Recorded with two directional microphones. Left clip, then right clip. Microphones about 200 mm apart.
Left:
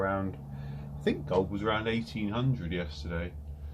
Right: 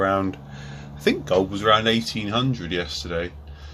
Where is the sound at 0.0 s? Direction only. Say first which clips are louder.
Right 10 dB; 40° right (ahead or behind).